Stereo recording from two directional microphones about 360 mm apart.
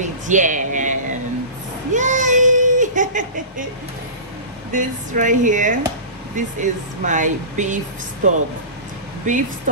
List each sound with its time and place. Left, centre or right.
0.0 s speech: right
1.9 s a sound: right
4.7 s speech: right